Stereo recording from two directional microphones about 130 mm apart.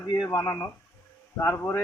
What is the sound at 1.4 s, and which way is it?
Speech, 15° left (ahead or behind).